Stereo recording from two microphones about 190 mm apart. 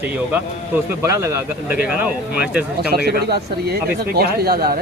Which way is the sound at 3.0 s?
55° right (ahead or behind).